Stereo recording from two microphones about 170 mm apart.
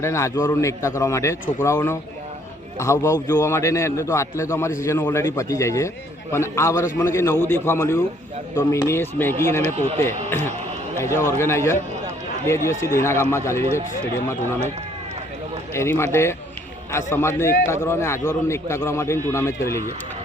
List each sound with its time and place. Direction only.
0.0 s a man's voice: 15° left (ahead or behind)
9.7 s speech: 40° right (ahead or behind)
10.2 s a man's voice: 15° left (ahead or behind)
15.7 s a man's voice: 15° left (ahead or behind)